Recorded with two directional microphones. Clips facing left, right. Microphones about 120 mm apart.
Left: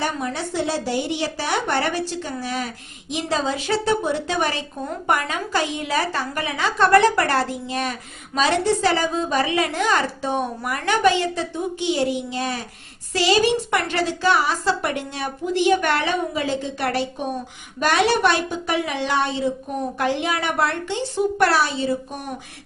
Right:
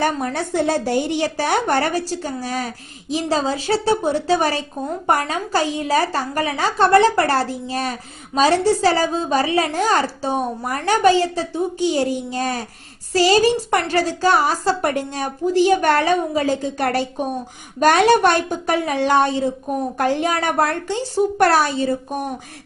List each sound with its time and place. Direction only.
0.0 s a woman's voice: 50° right (ahead or behind)